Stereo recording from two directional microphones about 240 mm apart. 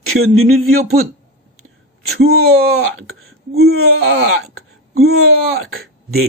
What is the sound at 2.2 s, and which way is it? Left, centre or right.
Speech, right.